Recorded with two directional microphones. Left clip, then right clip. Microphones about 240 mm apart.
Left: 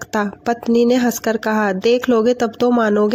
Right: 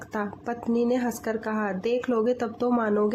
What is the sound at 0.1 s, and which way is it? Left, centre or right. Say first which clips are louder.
Speech: left 11 dB; left.